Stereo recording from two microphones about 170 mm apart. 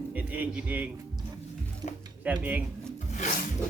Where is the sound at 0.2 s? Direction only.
10° right (ahead or behind).